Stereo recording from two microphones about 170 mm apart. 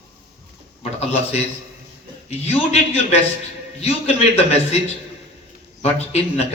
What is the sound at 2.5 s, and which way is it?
A man's voice, 35° left (ahead or behind).